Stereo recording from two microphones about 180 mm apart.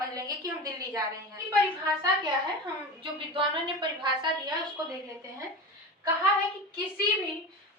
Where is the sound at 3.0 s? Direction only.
30° right (ahead or behind).